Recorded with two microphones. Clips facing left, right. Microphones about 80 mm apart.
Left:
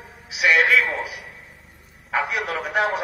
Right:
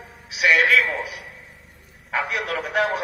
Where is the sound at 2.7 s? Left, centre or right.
Centre.